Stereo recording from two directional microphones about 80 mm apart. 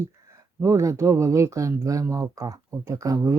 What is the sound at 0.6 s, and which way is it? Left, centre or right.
Speech, right.